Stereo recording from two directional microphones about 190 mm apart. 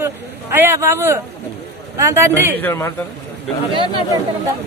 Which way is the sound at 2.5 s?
10° left (ahead or behind).